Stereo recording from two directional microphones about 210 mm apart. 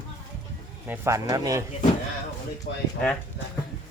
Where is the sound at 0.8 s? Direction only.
10° right (ahead or behind).